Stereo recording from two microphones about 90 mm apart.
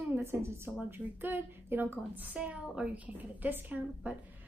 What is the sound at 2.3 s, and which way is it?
A woman's voice, 10° right (ahead or behind).